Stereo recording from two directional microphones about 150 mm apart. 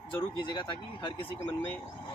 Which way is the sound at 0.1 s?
30° left (ahead or behind).